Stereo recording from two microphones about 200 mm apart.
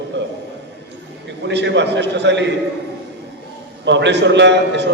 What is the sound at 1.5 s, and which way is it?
A man's voice, 60° right (ahead or behind).